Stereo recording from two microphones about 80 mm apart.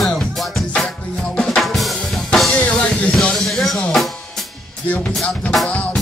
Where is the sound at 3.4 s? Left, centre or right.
Centre.